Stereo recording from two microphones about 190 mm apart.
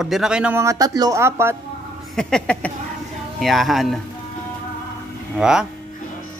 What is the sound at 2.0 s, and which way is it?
Speech, centre (ahead or behind).